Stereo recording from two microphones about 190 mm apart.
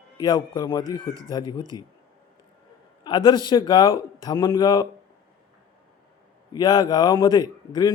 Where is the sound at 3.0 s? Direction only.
25° left (ahead or behind).